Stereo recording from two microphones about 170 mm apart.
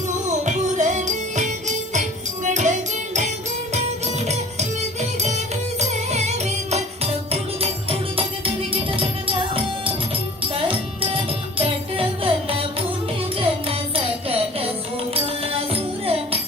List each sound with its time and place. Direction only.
0.3 s music: 45° right (ahead or behind)